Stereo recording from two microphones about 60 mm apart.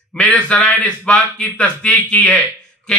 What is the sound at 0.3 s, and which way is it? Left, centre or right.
A man's voice, left.